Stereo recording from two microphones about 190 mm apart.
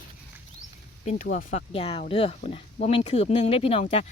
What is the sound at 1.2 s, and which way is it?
Speech, 45° left (ahead or behind).